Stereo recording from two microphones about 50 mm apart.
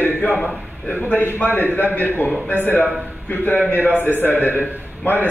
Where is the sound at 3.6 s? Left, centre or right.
Left.